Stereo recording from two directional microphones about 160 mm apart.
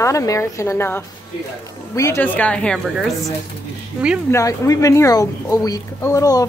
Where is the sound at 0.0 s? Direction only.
20° left (ahead or behind).